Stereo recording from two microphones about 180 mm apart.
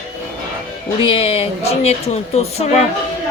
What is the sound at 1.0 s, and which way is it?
Speech, 30° left (ahead or behind).